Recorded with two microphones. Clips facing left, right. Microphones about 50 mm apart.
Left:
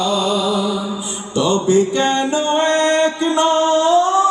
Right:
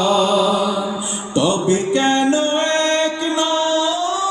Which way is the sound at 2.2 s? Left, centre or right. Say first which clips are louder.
Even; centre.